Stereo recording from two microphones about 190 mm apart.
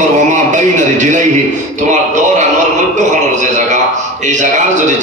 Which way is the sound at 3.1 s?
40° right (ahead or behind).